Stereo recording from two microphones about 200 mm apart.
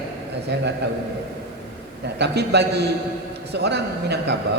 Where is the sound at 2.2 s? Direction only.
55° right (ahead or behind).